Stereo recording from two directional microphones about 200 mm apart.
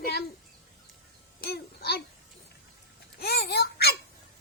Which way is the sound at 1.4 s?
55° left (ahead or behind).